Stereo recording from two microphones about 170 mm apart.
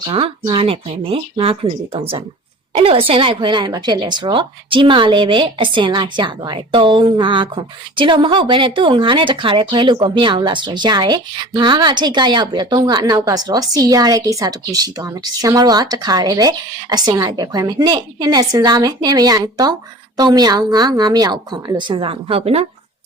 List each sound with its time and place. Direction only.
0.0 s a woman's voice: 30° right (ahead or behind)